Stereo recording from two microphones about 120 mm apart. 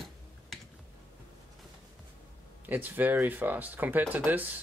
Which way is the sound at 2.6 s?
15° right (ahead or behind).